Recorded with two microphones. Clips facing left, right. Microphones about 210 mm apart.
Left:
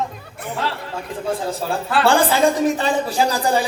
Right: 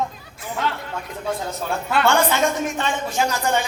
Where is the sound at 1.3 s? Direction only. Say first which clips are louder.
Left 3 dB; 30° left (ahead or behind).